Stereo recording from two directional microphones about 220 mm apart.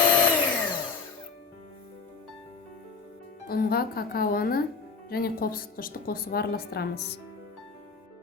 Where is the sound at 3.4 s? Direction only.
45° left (ahead or behind).